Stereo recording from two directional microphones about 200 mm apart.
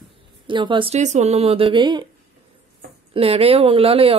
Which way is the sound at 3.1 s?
30° right (ahead or behind).